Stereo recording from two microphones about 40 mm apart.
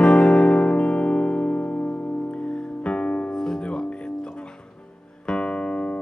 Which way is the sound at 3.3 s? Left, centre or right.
Centre.